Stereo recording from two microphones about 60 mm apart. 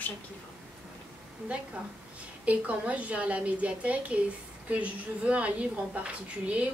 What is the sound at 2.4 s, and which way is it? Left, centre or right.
A woman's voice, right.